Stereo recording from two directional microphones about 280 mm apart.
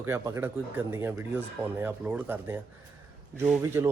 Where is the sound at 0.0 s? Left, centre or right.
Centre.